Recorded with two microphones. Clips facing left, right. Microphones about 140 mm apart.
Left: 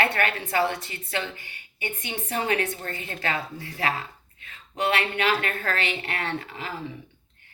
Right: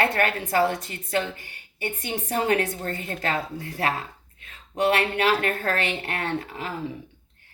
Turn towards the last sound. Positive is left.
turn(degrees=-45)  # may be behind; listen again after turning